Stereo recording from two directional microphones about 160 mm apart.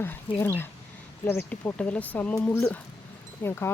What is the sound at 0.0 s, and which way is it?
Speech, 15° left (ahead or behind).